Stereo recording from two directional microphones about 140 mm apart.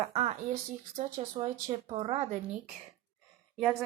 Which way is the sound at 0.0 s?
50° right (ahead or behind).